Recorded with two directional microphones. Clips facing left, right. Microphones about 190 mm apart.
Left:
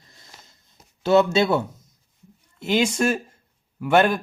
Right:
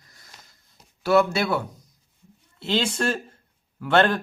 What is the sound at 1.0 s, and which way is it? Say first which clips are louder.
Speech: left 3 dB; 20° left (ahead or behind).